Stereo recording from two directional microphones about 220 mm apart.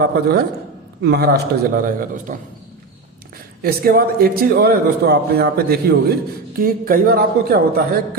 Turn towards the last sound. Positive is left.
turn(degrees=-45)  # may be behind; listen again after turning